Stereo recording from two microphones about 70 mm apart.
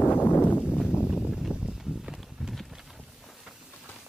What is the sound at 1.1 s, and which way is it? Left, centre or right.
Clip-clop, centre.